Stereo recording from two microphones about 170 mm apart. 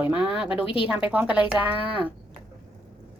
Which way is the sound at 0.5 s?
35° left (ahead or behind).